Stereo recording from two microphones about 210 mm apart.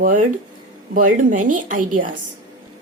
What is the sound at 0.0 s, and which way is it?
A woman's voice, 40° right (ahead or behind).